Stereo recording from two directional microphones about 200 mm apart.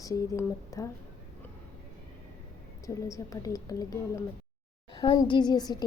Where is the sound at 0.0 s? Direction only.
15° left (ahead or behind).